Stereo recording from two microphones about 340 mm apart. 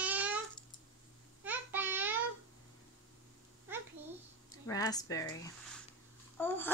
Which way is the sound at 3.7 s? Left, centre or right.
Centre.